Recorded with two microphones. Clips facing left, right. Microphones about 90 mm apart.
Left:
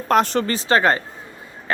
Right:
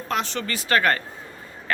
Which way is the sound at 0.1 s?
45° left (ahead or behind).